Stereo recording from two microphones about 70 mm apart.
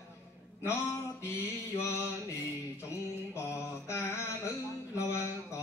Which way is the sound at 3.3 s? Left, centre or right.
Left.